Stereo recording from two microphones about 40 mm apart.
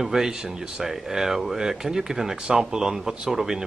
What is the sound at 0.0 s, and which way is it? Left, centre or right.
Speech, centre.